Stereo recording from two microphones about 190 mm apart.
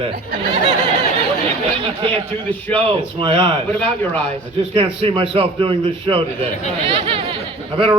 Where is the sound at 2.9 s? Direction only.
30° right (ahead or behind).